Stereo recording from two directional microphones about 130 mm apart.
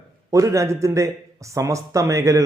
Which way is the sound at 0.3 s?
25° right (ahead or behind).